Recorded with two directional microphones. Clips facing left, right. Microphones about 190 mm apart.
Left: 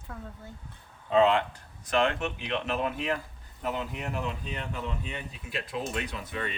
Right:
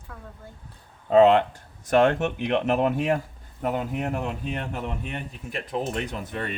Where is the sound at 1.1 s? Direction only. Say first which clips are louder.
Right 6 dB; 45° right (ahead or behind).